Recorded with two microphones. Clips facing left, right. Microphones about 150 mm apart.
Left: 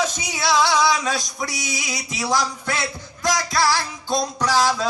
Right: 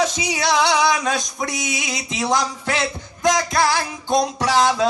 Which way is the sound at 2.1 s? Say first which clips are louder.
Right 2 dB; 20° right (ahead or behind).